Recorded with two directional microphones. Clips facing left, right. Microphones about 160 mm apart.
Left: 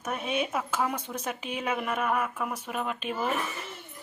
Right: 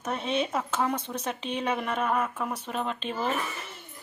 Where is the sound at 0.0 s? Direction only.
10° left (ahead or behind).